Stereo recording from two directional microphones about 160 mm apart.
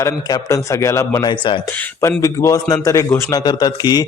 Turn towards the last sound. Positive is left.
turn(degrees=25)  # may be behind; listen again after turning